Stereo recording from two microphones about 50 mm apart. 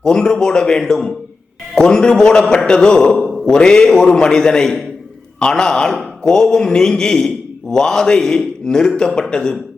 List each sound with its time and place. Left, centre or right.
0.0 s a man's voice: centre
3.1 s a sound: centre
3.4 s a man's voice: centre